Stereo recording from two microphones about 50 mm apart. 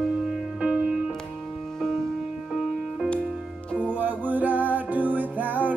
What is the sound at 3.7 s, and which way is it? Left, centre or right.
Music, right.